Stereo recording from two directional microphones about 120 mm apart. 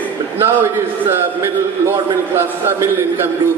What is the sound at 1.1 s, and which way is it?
A man's voice, 20° right (ahead or behind).